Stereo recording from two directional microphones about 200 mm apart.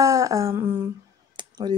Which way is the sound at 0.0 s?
15° right (ahead or behind).